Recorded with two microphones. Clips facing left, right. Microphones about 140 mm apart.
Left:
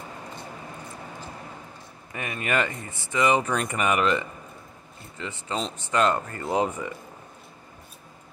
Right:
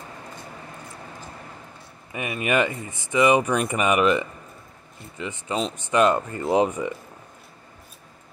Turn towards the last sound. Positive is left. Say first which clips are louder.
# right 5 dB
turn(degrees=-20)  # may be behind; listen again after turning